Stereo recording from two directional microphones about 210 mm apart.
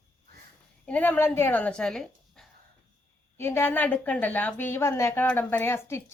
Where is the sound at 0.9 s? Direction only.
5° left (ahead or behind).